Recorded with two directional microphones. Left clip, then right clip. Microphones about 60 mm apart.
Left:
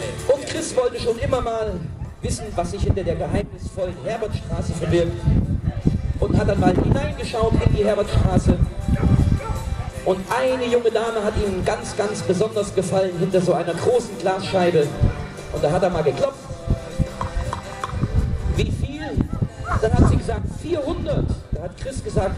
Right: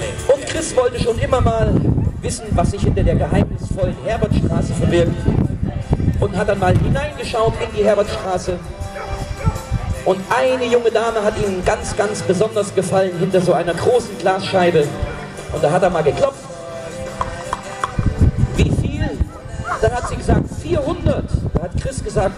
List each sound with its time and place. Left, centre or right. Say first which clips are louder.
0.0 s a man's voice: right 4 dB; right
6.1 s a man's voice: right 3 dB; right
9.0 s music: left 5 dB; right
10.0 s a man's voice: right 4 dB; right
17.2 s music: right 8 dB; right
21.8 s a man's voice: right 4 dB; right